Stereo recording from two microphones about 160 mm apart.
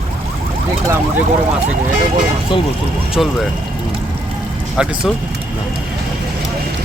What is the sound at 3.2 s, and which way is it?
Speech, centre (ahead or behind).